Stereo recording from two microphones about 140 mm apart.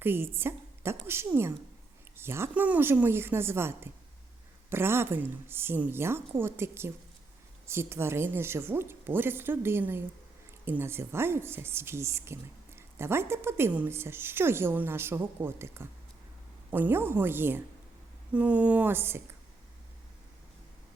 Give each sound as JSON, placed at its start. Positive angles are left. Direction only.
{"t": 0.0, "sound": "a woman's voice", "side_deg": -15}